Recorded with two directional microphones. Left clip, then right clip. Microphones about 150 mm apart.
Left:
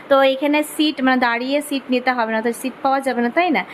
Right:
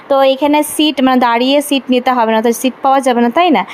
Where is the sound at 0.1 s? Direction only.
35° right (ahead or behind).